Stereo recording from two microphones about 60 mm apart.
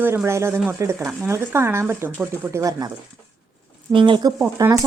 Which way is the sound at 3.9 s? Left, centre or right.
Right.